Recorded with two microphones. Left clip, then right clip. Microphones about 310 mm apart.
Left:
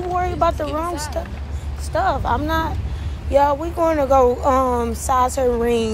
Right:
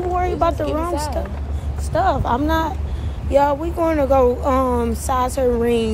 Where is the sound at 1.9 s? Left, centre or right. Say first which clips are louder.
Right 1 dB; centre.